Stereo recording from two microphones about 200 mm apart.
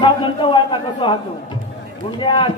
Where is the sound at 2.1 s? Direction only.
25° left (ahead or behind).